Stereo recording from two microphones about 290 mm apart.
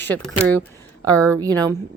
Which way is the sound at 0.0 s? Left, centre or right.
Centre.